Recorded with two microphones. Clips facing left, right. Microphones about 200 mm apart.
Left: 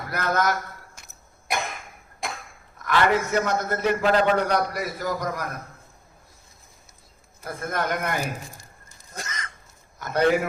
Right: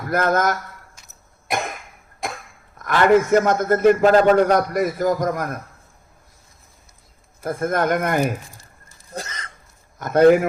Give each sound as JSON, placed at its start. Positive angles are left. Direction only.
{"t": 0.1, "sound": "a man's voice", "side_deg": -50}
{"t": 2.7, "sound": "a man's voice", "side_deg": -50}
{"t": 7.4, "sound": "a man's voice", "side_deg": -50}
{"t": 9.1, "sound": "a sound", "side_deg": -30}
{"t": 10.0, "sound": "a man's voice", "side_deg": -50}